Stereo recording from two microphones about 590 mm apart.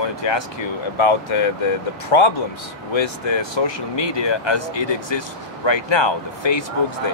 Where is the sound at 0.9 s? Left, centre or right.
Left.